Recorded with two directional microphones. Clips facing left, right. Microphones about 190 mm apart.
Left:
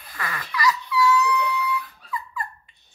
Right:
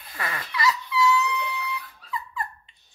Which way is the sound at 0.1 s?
25° right (ahead or behind).